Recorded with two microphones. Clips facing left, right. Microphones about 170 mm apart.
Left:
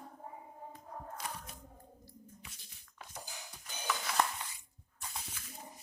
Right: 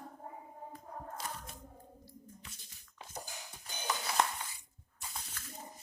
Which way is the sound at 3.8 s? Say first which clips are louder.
Even; 30° right (ahead or behind).